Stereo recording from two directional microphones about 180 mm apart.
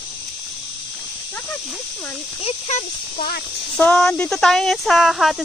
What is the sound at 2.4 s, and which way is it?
Speech, 35° left (ahead or behind).